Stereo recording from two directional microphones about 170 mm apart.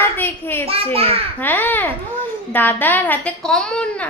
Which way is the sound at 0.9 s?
35° right (ahead or behind).